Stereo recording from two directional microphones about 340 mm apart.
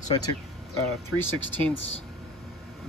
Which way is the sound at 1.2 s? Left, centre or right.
Left.